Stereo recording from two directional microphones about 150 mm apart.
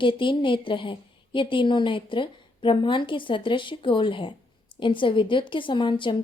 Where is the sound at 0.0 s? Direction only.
35° left (ahead or behind).